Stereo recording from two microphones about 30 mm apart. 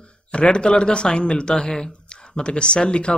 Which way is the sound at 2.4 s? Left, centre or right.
Left.